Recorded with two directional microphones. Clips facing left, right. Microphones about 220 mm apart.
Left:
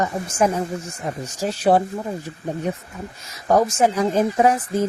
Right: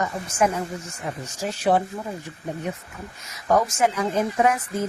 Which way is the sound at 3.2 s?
30° left (ahead or behind).